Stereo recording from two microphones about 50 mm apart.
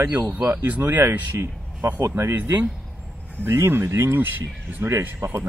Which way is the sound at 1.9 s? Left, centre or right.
Right.